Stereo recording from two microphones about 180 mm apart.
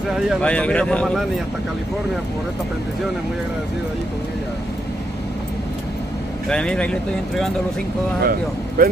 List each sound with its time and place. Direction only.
0.4 s speech: 5° left (ahead or behind)
6.5 s speech: 5° left (ahead or behind)
8.2 s speech: 55° right (ahead or behind)